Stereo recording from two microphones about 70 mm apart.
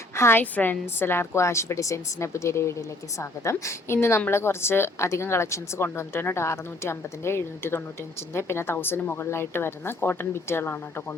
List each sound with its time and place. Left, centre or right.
0.2 s a woman's voice: left